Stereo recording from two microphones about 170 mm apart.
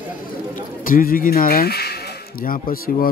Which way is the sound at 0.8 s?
55° left (ahead or behind).